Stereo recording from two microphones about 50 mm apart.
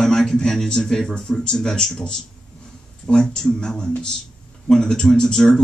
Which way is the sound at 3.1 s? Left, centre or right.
Centre.